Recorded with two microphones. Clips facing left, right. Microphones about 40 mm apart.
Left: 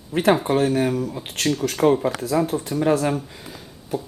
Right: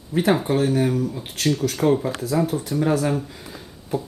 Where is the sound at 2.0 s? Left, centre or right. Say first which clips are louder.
Left 3 dB; left.